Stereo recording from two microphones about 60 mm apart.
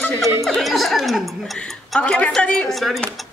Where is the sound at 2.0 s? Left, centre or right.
Centre.